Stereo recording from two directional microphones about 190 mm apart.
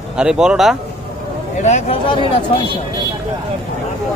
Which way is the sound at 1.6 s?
35° left (ahead or behind).